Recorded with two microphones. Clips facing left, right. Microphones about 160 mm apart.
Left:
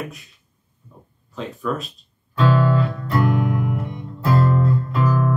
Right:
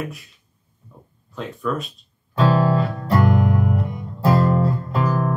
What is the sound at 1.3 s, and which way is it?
Speech, centre (ahead or behind).